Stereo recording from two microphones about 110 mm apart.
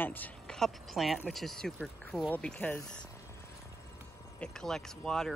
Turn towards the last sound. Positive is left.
turn(degrees=5)  # may be behind; listen again after turning